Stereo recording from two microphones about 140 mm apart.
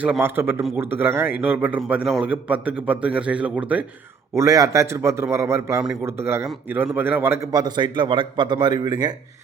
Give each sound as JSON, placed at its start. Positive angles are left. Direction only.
{"t": 0.0, "sound": "a man's voice", "side_deg": -10}
{"t": 4.4, "sound": "a man's voice", "side_deg": -25}
{"t": 7.5, "sound": "a man's voice", "side_deg": -30}